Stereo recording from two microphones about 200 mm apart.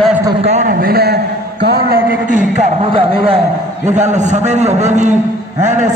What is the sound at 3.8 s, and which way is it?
A man's voice, 35° right (ahead or behind).